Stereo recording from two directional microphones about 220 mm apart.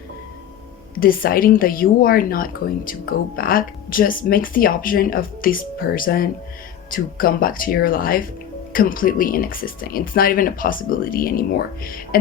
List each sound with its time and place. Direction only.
0.9 s speech: 40° left (ahead or behind)